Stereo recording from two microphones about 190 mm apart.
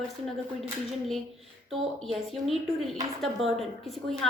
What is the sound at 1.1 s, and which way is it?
A woman's voice, centre (ahead or behind).